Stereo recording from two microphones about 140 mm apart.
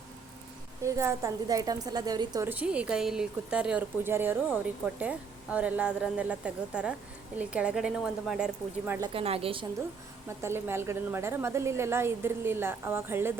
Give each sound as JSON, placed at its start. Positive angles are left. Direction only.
{"t": 0.9, "sound": "a woman's voice", "side_deg": -20}
{"t": 2.5, "sound": "a woman's voice", "side_deg": -10}
{"t": 9.1, "sound": "a woman's voice", "side_deg": -45}
{"t": 10.2, "sound": "a woman's voice", "side_deg": -20}